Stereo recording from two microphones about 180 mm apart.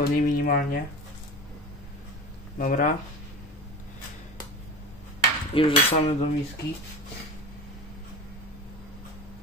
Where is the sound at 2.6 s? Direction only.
50° left (ahead or behind).